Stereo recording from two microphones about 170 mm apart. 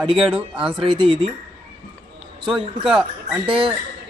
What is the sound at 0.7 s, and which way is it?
Speech, 30° right (ahead or behind).